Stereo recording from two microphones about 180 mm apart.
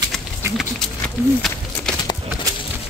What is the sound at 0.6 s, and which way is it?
Speech, 5° left (ahead or behind).